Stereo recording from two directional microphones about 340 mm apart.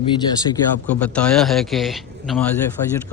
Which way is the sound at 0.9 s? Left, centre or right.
Centre.